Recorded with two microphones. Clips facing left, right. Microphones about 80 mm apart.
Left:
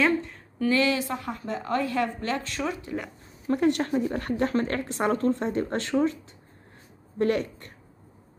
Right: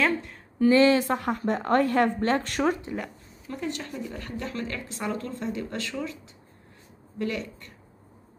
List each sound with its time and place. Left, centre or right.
0.0 s a sound: centre
0.6 s speech: right
0.9 s a woman's voice: right
3.4 s a woman's voice: left
7.2 s a woman's voice: left